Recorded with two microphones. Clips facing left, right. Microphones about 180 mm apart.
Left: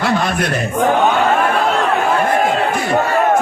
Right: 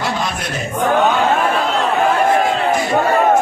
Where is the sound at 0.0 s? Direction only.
60° left (ahead or behind).